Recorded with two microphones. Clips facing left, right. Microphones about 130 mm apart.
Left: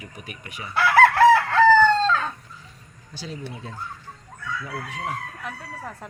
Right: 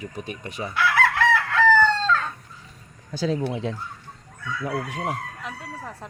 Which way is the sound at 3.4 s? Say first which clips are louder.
Right 9 dB; 80° right.